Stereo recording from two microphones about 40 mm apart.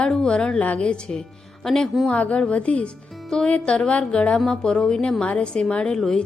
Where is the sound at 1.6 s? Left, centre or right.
Centre.